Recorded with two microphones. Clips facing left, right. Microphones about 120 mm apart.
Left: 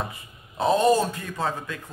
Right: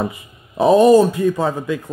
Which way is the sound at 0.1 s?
10° right (ahead or behind).